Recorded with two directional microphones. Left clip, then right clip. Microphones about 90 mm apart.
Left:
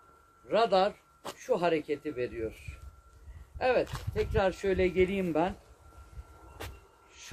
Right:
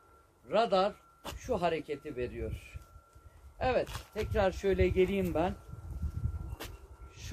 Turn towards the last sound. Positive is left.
turn(degrees=-35)  # may be behind; listen again after turning